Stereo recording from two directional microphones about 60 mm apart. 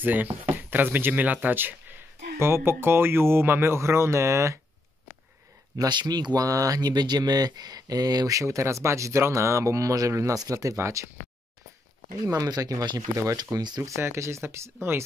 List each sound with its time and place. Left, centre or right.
0.0 s speech: right
2.3 s speech: right
5.8 s speech: right
7.3 s speech: right
12.3 s speech: right
14.0 s speech: right